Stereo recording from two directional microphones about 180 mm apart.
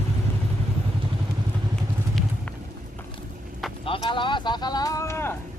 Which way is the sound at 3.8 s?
30° left (ahead or behind).